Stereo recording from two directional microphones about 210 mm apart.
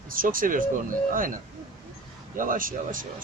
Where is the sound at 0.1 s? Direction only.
40° right (ahead or behind).